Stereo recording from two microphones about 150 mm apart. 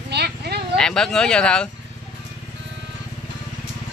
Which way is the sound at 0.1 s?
90° right.